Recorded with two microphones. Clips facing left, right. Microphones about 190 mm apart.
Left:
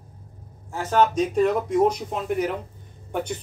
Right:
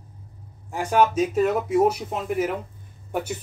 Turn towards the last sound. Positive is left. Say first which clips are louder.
# even
turn(degrees=-5)  # may be behind; listen again after turning